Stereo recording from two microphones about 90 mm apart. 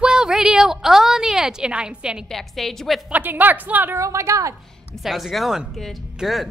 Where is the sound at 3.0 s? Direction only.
20° right (ahead or behind).